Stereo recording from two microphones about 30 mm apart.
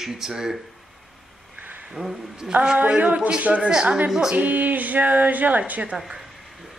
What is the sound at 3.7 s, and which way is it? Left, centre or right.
Speech, right.